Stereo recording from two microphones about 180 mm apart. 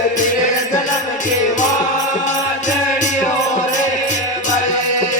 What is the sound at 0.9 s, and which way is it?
Music, 45° left (ahead or behind).